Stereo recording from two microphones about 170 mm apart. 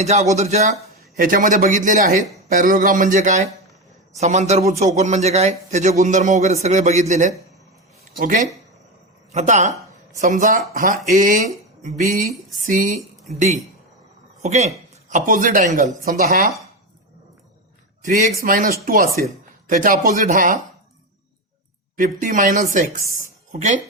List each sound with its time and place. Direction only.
0.0 s a man's voice: 40° right (ahead or behind)
14.4 s a man's voice: 40° right (ahead or behind)
18.0 s a man's voice: 50° right (ahead or behind)
21.9 s a man's voice: 50° right (ahead or behind)